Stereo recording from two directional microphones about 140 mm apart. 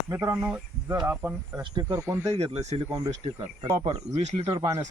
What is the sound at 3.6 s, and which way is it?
Speech, 25° right (ahead or behind).